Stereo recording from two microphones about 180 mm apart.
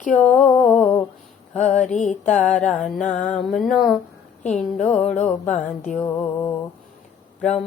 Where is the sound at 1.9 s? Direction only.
40° left (ahead or behind).